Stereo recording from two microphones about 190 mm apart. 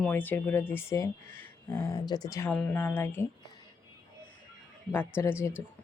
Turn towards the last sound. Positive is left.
turn(degrees=10)  # may be behind; listen again after turning